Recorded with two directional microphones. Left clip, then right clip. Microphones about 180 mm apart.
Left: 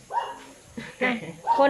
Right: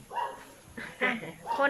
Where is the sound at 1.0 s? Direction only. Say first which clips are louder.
Left 4 dB; 20° left (ahead or behind).